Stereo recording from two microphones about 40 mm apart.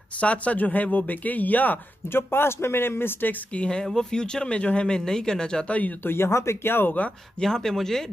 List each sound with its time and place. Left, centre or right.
0.2 s speech: left
2.1 s speech: left
3.5 s speech: left
3.8 s speech: centre
5.7 s speech: left
6.0 s speech: left
7.3 s speech: centre